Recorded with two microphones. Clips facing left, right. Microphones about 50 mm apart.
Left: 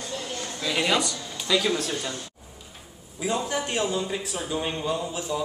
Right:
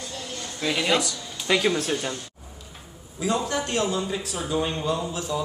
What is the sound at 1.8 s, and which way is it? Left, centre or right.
Speech, right.